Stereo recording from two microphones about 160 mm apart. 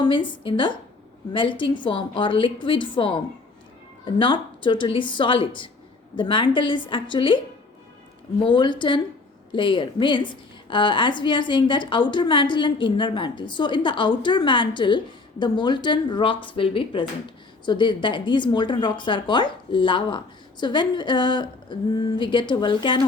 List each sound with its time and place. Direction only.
0.0 s a woman's voice: 30° left (ahead or behind)
8.4 s a woman's voice: 30° left (ahead or behind)